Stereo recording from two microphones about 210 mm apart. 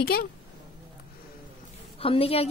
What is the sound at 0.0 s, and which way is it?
Speech, 45° left (ahead or behind).